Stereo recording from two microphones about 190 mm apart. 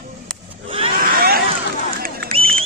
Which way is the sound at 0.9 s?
50° right (ahead or behind).